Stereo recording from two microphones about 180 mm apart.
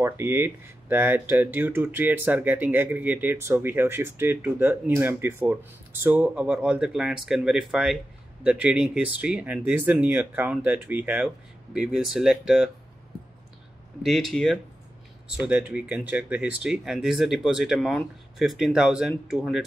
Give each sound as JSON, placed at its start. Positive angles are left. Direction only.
{"t": 0.0, "sound": "speech", "side_deg": -15}
{"t": 14.0, "sound": "speech", "side_deg": 0}